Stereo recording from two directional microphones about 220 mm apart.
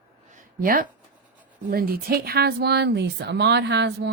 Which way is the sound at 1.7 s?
40° right (ahead or behind).